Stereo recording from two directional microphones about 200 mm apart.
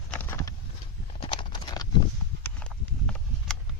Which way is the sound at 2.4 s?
5° left (ahead or behind).